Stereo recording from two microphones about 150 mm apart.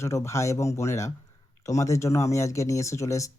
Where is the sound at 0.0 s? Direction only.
20° left (ahead or behind).